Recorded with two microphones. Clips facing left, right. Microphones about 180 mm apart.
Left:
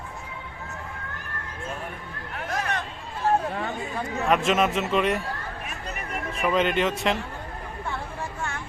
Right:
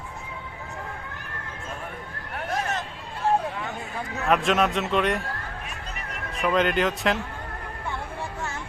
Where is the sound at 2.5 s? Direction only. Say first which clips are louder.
Right 1 dB; 25° right (ahead or behind).